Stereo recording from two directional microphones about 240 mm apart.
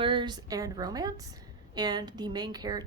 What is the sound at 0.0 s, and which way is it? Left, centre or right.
A woman's voice, centre.